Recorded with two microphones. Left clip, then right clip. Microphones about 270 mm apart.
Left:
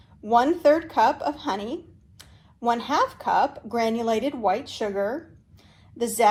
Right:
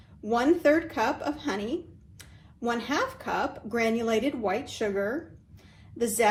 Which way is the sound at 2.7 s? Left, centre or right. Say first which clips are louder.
Left 6 dB; centre.